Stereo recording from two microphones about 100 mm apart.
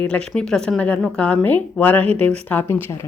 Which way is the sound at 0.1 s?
10° left (ahead or behind).